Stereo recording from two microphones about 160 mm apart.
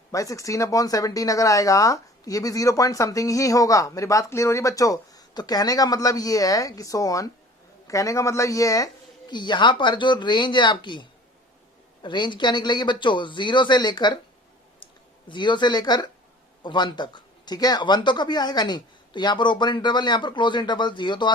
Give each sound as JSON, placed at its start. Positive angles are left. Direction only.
{"t": 0.1, "sound": "speech", "side_deg": 20}
{"t": 12.0, "sound": "speech", "side_deg": 30}
{"t": 14.8, "sound": "clicking", "side_deg": 30}
{"t": 15.3, "sound": "speech", "side_deg": 30}